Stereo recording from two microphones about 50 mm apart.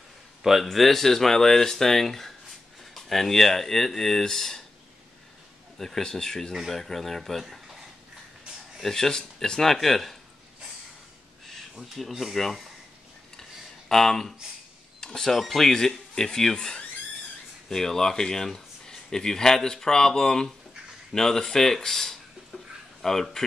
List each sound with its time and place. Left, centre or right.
0.4 s speech: centre
5.8 s speech: centre
8.8 s speech: centre
11.7 s speech: centre
13.4 s a sound: centre
15.0 s speech: centre
22.5 s a sound: left
23.0 s speech: centre